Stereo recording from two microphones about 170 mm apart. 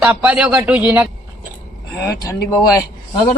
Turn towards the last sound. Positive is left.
turn(degrees=25)  # may be behind; listen again after turning